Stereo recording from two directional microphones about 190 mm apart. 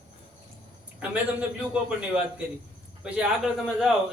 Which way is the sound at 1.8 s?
5° right (ahead or behind).